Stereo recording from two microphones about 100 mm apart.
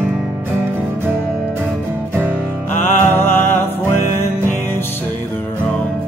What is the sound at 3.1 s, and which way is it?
Music, 25° left (ahead or behind).